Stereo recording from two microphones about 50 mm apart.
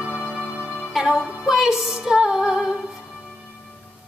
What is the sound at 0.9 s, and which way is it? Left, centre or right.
Music, centre.